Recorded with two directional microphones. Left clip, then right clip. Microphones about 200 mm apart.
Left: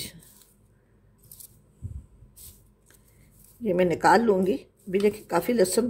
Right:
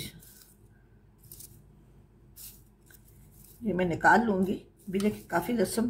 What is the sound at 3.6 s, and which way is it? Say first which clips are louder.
Speech: left 4 dB; 45° left (ahead or behind).